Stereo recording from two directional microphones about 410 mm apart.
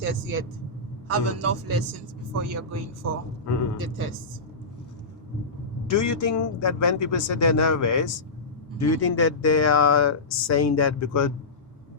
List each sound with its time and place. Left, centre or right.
0.0 s a man's voice: right
3.4 s speech: left
3.8 s speech: right
6.0 s speech: left